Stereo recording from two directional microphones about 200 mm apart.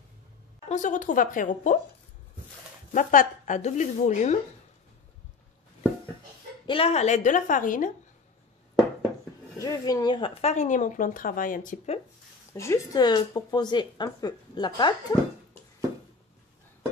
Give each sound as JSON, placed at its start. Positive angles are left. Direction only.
{"t": 0.7, "sound": "speech", "side_deg": 40}
{"t": 2.9, "sound": "speech", "side_deg": 40}
{"t": 6.6, "sound": "speech", "side_deg": 25}
{"t": 9.6, "sound": "speech", "side_deg": 20}
{"t": 12.5, "sound": "speech", "side_deg": 15}